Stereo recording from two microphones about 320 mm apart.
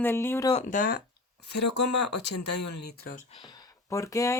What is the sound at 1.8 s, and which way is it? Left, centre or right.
Speech, left.